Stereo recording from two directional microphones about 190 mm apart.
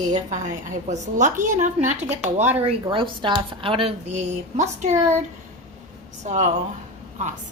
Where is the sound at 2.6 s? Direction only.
25° right (ahead or behind).